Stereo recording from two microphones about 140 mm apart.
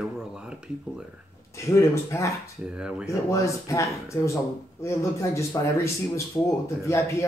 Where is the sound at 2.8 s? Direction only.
5° right (ahead or behind).